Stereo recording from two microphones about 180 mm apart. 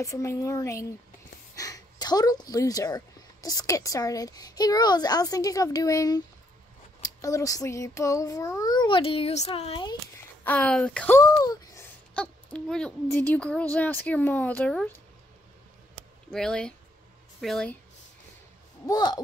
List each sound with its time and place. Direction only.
0.0 s speech: 15° left (ahead or behind)
7.0 s child singing: 20° left (ahead or behind)
10.4 s speech: 5° left (ahead or behind)
11.1 s speech: 20° left (ahead or behind)
16.3 s speech: 5° left (ahead or behind)
18.9 s child singing: 20° left (ahead or behind)